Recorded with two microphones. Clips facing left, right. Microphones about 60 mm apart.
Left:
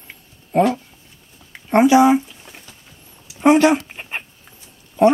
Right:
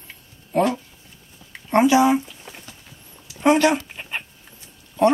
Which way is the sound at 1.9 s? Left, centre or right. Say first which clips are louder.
Left 5 dB; centre.